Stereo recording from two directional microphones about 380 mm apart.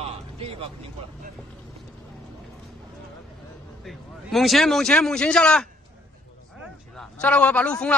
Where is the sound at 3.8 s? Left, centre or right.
Centre.